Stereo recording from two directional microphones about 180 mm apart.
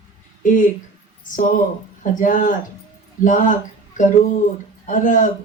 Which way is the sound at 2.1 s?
45° left (ahead or behind).